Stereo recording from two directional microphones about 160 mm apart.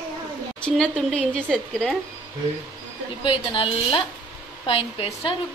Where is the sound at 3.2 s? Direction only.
30° left (ahead or behind).